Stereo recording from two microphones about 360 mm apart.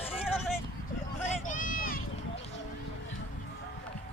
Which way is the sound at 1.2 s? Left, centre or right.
Left.